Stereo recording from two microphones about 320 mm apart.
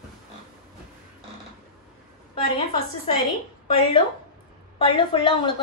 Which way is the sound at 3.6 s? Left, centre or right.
Centre.